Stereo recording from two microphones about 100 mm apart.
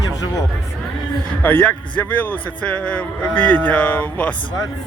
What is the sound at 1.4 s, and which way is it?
A man's voice, 20° left (ahead or behind).